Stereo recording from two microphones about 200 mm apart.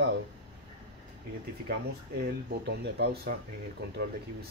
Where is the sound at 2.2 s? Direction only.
55° right (ahead or behind).